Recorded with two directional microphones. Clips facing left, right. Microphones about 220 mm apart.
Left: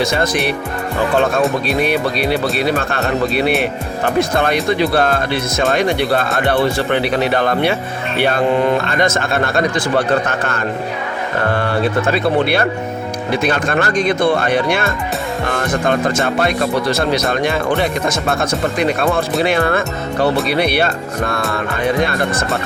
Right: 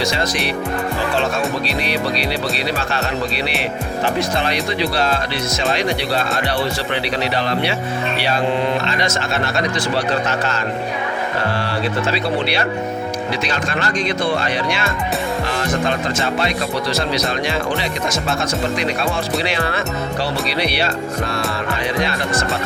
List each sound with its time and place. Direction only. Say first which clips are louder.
0.0 s speech: left 4 dB; 55° left (ahead or behind)